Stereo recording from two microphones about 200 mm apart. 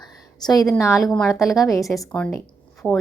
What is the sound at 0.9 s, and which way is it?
Speech, centre (ahead or behind).